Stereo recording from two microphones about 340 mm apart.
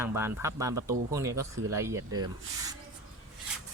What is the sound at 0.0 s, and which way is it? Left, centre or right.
Speech, centre.